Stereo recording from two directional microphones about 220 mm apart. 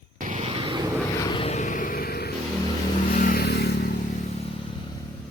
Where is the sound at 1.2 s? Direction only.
20° left (ahead or behind); by 2.3 s 45° left (ahead or behind).